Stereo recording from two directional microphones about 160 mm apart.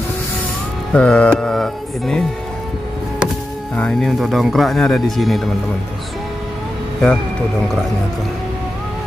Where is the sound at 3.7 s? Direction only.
5° left (ahead or behind).